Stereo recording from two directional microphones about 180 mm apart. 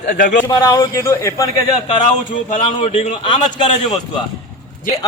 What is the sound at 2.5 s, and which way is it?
Speech, 35° left (ahead or behind).